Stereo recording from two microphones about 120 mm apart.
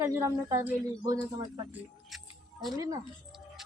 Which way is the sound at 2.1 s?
Centre (ahead or behind).